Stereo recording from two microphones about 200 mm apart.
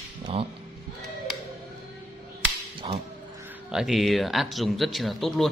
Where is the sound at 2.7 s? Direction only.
25° right (ahead or behind).